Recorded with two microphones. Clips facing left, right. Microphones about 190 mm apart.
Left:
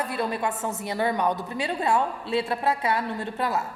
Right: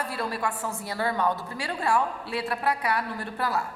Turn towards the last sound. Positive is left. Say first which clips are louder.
# left 2 dB
turn(degrees=20)  # may be behind; listen again after turning